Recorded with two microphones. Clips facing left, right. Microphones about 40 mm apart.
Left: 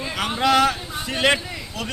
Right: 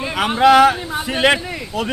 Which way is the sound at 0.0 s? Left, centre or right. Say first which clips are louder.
Right 8 dB; right.